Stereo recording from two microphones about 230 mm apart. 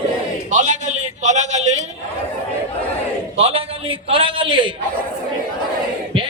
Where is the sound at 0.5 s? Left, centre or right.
Right.